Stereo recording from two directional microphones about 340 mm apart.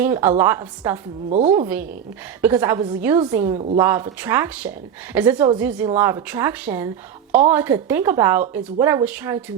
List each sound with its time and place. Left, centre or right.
0.2 s speech: centre
1.3 s a woman's voice: centre
1.6 s speech: centre
3.8 s speech: centre